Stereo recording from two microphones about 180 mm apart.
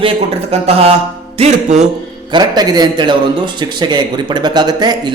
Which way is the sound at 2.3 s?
20° right (ahead or behind).